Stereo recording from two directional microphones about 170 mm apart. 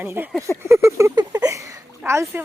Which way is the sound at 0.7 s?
15° right (ahead or behind).